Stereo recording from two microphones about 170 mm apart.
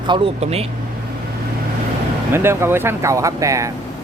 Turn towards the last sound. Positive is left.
turn(degrees=-20)  # may be behind; listen again after turning